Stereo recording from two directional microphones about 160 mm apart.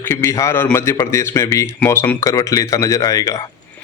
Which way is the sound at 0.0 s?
15° left (ahead or behind).